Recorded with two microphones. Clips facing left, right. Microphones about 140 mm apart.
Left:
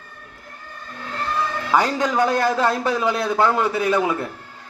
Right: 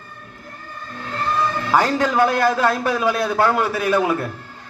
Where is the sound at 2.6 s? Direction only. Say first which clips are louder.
Right 1 dB; 25° left (ahead or behind).